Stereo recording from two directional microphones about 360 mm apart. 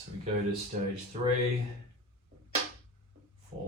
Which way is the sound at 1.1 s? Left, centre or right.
Centre.